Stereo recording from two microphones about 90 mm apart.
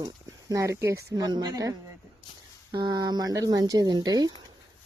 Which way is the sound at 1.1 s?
50° right (ahead or behind).